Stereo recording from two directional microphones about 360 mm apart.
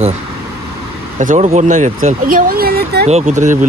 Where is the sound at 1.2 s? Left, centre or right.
Centre.